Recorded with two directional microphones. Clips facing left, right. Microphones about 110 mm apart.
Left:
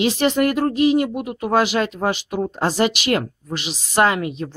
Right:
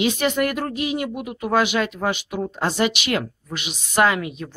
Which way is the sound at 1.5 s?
40° left (ahead or behind).